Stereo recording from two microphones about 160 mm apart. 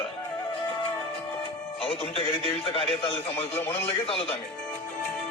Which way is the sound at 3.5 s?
15° left (ahead or behind).